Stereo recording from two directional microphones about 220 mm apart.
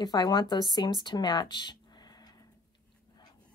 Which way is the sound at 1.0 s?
20° left (ahead or behind).